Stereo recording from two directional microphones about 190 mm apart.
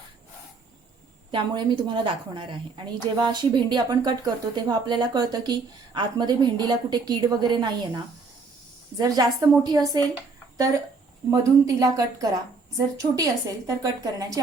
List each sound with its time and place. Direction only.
1.3 s a woman's voice: 25° right (ahead or behind)
11.3 s a woman's voice: 20° right (ahead or behind)